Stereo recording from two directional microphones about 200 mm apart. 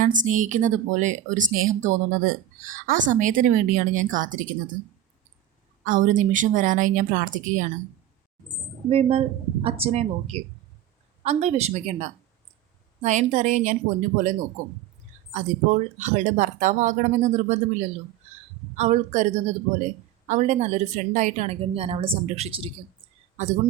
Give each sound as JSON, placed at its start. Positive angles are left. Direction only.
{"t": 0.0, "sound": "speech", "side_deg": -40}
{"t": 5.8, "sound": "speech", "side_deg": -40}
{"t": 8.9, "sound": "speech", "side_deg": -30}